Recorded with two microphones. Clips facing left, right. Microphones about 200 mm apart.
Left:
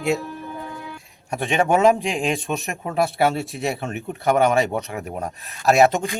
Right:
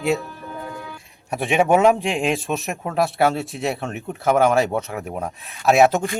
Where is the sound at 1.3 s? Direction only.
Centre (ahead or behind).